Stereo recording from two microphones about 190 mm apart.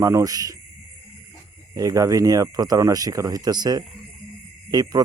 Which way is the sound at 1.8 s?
20° right (ahead or behind).